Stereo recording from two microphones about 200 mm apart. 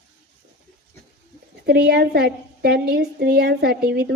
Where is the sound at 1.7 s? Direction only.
50° right (ahead or behind).